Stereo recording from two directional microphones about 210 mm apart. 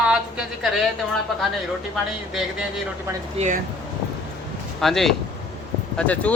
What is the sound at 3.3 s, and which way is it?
Speech, 35° right (ahead or behind).